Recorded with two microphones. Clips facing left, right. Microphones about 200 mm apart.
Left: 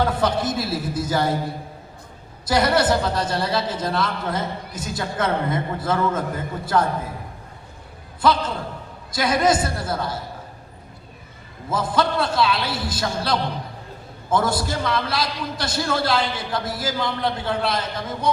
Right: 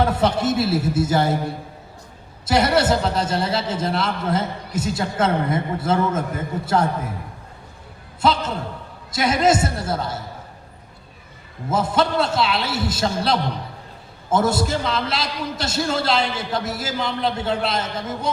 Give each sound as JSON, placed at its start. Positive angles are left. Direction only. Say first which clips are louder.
{"t": 0.0, "sound": "a man's voice", "louder": "right 2 dB", "side_deg": -25}
{"t": 8.2, "sound": "a man's voice", "louder": "even", "side_deg": -25}
{"t": 11.7, "sound": "a man's voice", "louder": "right 2 dB", "side_deg": -25}